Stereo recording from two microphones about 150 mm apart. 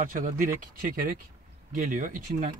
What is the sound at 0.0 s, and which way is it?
Speech, 65° right (ahead or behind).